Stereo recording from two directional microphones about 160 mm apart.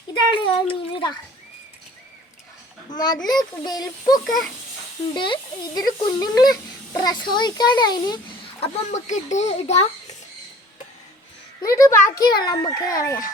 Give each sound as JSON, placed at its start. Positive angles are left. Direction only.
{"t": 0.3, "sound": "speech", "side_deg": 35}
{"t": 2.9, "sound": "speech", "side_deg": 25}
{"t": 4.2, "sound": "speech", "side_deg": 0}
{"t": 5.1, "sound": "speech", "side_deg": 30}
{"t": 8.6, "sound": "speech", "side_deg": 50}
{"t": 11.6, "sound": "speech", "side_deg": 20}